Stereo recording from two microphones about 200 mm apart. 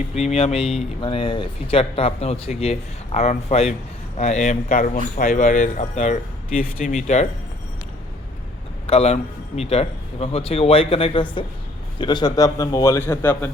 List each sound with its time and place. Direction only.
0.1 s speech: 30° left (ahead or behind)
8.9 s a man's voice: 30° left (ahead or behind); by 13.5 s 10° left (ahead or behind)